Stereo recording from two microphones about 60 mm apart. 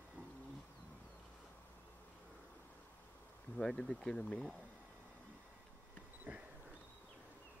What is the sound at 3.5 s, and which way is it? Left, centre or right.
Speech, centre.